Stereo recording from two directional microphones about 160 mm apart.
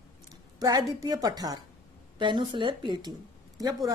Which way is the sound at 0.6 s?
25° right (ahead or behind).